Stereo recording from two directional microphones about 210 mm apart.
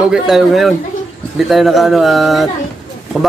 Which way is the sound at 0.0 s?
5° right (ahead or behind).